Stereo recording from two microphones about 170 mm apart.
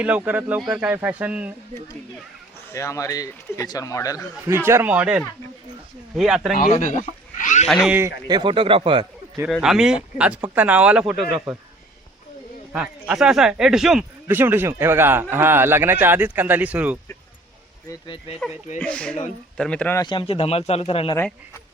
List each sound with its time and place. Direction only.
0.0 s speech: 10° right (ahead or behind)
2.7 s speech: 20° left (ahead or behind)
4.4 s speech: 15° right (ahead or behind)
6.6 s speech: 45° left (ahead or behind)
7.7 s speech: centre (ahead or behind)
8.3 s speech: 30° right (ahead or behind)
9.5 s speech: 5° right (ahead or behind)
12.7 s speech: 5° right (ahead or behind)
17.8 s speech: 30° left (ahead or behind)
18.8 s speech: 5° left (ahead or behind)
20.0 s speech: 30° left (ahead or behind)